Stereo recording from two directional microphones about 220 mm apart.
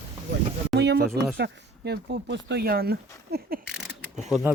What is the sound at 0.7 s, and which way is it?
Speech, 50° right (ahead or behind).